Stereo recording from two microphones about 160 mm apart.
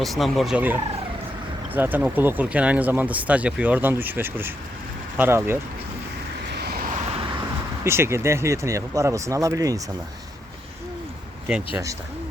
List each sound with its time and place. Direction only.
0.0 s gobble: centre (ahead or behind)
1.7 s speech: 10° right (ahead or behind)
6.5 s vehicle: 85° right
7.9 s speech: 15° right (ahead or behind)